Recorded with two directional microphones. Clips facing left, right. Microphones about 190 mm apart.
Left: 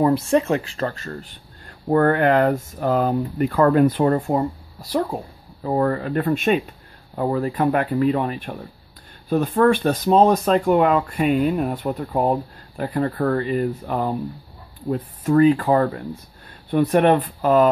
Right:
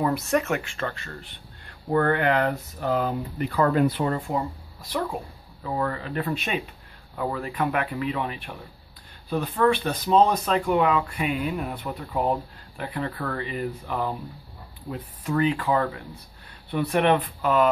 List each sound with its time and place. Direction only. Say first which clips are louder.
0.0 s speech: left 6 dB; 30° left (ahead or behind); by 6.6 s 50° left (ahead or behind)
7.2 s speech: left 6 dB; 35° left (ahead or behind)